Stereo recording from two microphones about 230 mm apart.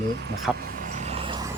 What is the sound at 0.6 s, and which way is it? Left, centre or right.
Vehicle, right.